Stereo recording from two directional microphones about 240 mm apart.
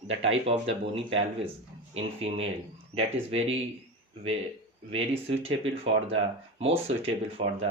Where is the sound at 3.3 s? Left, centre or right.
Right.